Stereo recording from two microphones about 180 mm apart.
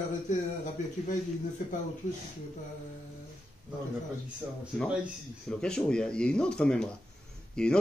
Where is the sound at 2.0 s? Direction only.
45° left (ahead or behind).